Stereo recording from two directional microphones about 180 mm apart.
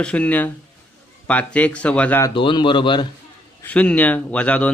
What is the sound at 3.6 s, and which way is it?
Speech, 5° left (ahead or behind).